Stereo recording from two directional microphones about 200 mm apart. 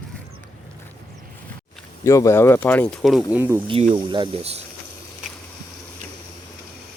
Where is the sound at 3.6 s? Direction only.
25° right (ahead or behind).